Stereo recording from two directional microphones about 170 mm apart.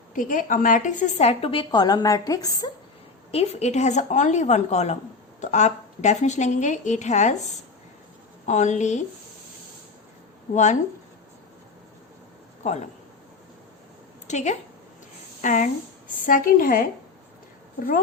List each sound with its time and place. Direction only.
0.1 s a woman's voice: 50° left (ahead or behind); by 2.6 s 20° left (ahead or behind)
3.3 s a woman's voice: 40° left (ahead or behind)
8.4 s a woman's voice: 45° left (ahead or behind)
10.5 s a woman's voice: 45° left (ahead or behind)
12.6 s a woman's voice: 45° left (ahead or behind)
14.3 s a woman's voice: 45° left (ahead or behind)